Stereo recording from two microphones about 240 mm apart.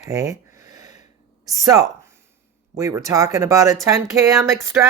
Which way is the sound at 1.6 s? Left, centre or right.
Centre.